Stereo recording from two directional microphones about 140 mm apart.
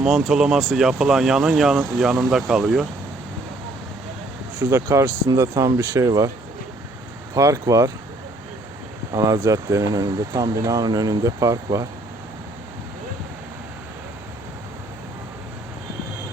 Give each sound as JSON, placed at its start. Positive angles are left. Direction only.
{"t": 0.3, "sound": "speech", "side_deg": -5}
{"t": 4.6, "sound": "speech", "side_deg": -20}
{"t": 7.3, "sound": "speech", "side_deg": -20}
{"t": 9.1, "sound": "speech", "side_deg": -25}